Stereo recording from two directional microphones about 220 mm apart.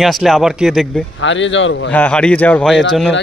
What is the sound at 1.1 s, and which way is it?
Speech, 55° left (ahead or behind).